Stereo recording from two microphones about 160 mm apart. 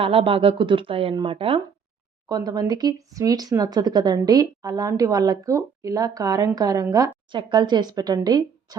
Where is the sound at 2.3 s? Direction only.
25° right (ahead or behind).